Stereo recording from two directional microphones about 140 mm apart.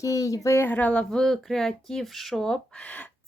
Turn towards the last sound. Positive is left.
turn(degrees=5)  # may be behind; listen again after turning